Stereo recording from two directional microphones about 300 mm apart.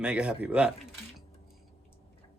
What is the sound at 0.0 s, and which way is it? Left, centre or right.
Speech, centre.